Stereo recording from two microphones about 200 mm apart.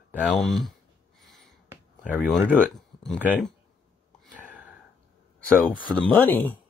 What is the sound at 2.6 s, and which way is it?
Speech, 5° left (ahead or behind).